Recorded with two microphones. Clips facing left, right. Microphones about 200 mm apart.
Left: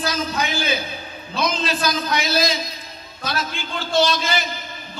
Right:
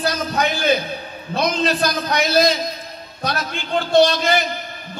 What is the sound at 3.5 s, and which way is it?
A man's voice, 60° right (ahead or behind).